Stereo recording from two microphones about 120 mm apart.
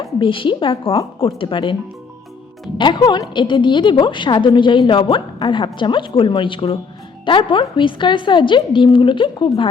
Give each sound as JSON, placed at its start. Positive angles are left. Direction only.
{"t": 0.2, "sound": "a woman's voice", "side_deg": 45}
{"t": 2.7, "sound": "a woman's voice", "side_deg": 40}